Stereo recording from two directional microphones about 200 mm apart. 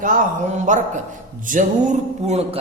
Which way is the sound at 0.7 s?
40° right (ahead or behind).